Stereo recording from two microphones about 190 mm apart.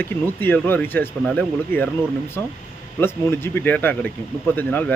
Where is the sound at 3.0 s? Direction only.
10° left (ahead or behind).